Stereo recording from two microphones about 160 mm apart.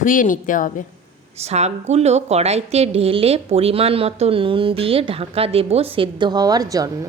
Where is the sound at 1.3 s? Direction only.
40° right (ahead or behind); by 7.0 s 20° right (ahead or behind).